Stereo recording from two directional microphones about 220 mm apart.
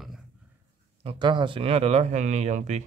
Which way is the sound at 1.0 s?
25° right (ahead or behind).